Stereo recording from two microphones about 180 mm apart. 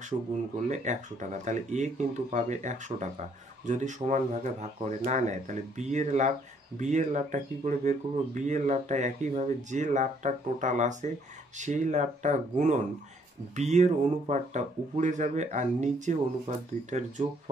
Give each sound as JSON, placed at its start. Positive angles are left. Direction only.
{"t": 0.1, "sound": "speech", "side_deg": -25}
{"t": 0.7, "sound": "speech", "side_deg": -40}